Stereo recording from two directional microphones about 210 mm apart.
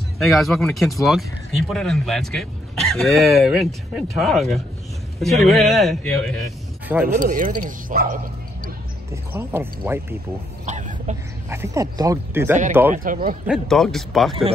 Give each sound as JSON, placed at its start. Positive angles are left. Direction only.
{"t": 0.2, "sound": "speech", "side_deg": 0}
{"t": 7.2, "sound": "speech", "side_deg": -40}
{"t": 9.1, "sound": "speech", "side_deg": -10}
{"t": 10.6, "sound": "a sound", "side_deg": -35}
{"t": 11.4, "sound": "speech", "side_deg": -15}
{"t": 12.9, "sound": "speech", "side_deg": -40}
{"t": 13.5, "sound": "speech", "side_deg": 0}